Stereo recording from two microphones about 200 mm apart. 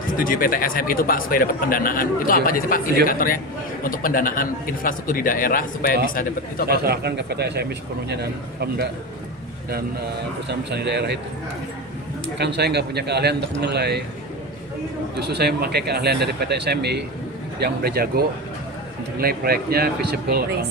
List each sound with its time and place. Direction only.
0.2 s speech: 45° left (ahead or behind)
6.7 s speech: 50° right (ahead or behind)
10.5 s speech: 60° right (ahead or behind)
12.4 s speech: 55° right (ahead or behind)
15.1 s speech: 55° right (ahead or behind)